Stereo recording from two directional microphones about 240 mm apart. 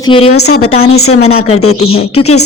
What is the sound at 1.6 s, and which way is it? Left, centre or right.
Speech, left.